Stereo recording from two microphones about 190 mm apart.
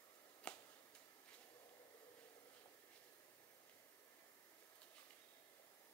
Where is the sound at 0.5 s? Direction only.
5° left (ahead or behind).